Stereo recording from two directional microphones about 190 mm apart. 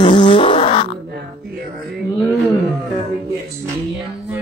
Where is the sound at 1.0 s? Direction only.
55° right (ahead or behind).